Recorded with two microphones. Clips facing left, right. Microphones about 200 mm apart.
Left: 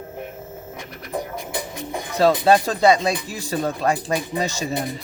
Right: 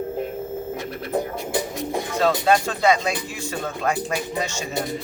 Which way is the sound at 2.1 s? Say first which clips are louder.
Left 4 dB; 35° left (ahead or behind).